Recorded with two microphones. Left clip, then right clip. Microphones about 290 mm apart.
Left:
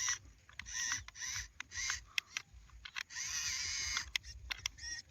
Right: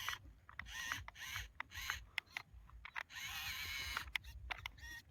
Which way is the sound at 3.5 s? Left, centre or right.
Centre.